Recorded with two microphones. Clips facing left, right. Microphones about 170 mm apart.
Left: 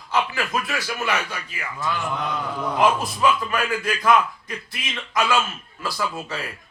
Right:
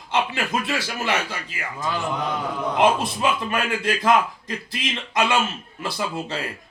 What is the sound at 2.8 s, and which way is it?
A man's voice, 25° right (ahead or behind).